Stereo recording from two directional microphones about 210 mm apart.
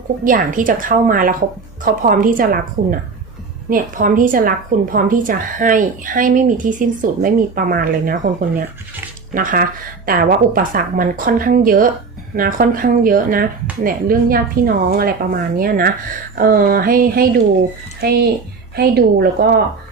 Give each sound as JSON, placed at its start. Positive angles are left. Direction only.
{"t": 0.3, "sound": "a woman's voice", "side_deg": -40}